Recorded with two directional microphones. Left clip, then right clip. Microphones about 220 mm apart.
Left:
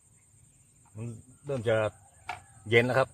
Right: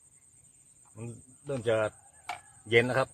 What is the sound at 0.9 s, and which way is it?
Speech, 10° left (ahead or behind).